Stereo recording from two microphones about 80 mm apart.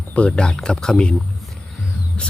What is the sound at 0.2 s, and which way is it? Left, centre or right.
Speech, centre.